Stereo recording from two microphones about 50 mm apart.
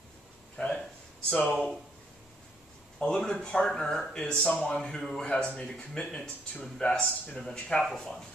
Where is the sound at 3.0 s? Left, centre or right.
Left.